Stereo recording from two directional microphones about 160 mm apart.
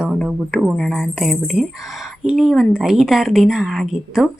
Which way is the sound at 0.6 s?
Centre (ahead or behind).